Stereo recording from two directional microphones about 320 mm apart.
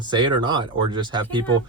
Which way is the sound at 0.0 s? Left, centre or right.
Centre.